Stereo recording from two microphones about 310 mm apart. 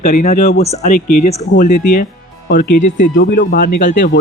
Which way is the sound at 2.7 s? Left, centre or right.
Left.